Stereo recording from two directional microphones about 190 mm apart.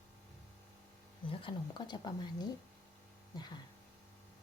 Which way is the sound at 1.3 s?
25° left (ahead or behind).